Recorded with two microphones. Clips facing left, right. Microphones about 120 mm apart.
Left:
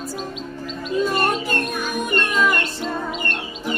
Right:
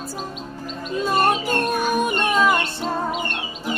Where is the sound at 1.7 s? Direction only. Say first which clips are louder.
Right 3 dB; 45° right (ahead or behind).